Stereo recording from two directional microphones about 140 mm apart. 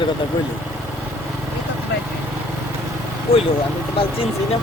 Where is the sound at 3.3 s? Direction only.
40° left (ahead or behind).